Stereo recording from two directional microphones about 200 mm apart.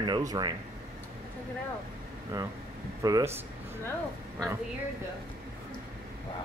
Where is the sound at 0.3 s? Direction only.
20° right (ahead or behind).